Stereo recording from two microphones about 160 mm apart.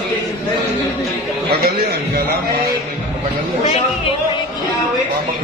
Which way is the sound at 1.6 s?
75° right (ahead or behind).